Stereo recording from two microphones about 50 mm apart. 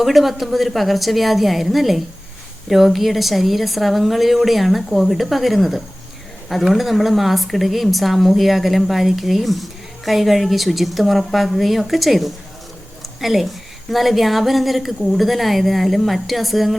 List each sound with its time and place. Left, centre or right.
0.0 s a woman's voice: centre